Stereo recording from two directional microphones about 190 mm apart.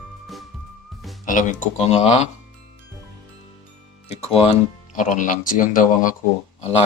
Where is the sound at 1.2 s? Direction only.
40° left (ahead or behind).